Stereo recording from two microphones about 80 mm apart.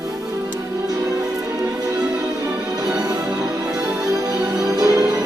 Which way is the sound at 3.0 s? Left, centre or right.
Right.